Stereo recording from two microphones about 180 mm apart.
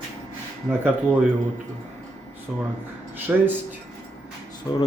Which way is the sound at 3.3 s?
10° right (ahead or behind).